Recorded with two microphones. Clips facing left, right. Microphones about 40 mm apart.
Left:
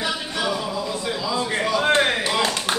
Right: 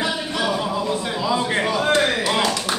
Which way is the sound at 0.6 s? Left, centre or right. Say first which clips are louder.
Right 4 dB; right.